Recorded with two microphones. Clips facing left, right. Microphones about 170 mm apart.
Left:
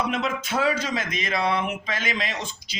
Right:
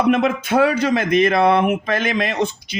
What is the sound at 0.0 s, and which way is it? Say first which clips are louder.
Speech: right 9 dB; 55° right (ahead or behind).